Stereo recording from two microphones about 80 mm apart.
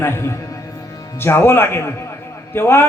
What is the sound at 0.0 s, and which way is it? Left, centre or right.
A man's voice, left.